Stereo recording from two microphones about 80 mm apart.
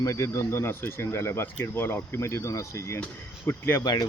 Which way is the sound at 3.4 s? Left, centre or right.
Left.